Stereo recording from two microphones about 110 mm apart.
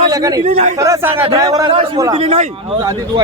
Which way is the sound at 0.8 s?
25° right (ahead or behind).